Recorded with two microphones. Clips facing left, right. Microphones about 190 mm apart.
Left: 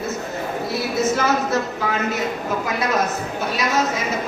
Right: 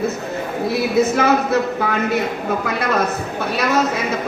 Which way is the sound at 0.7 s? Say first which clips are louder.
Right 5 dB; 60° right (ahead or behind).